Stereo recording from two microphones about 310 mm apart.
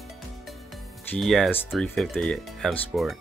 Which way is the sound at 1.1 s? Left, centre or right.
Centre.